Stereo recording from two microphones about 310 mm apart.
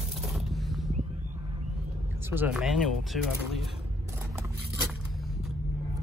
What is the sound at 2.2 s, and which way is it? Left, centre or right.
Speech, centre.